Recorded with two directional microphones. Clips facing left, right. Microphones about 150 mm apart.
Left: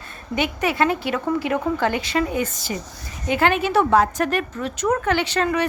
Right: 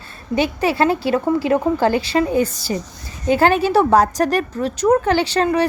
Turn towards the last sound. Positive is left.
turn(degrees=-35)  # may be behind; listen again after turning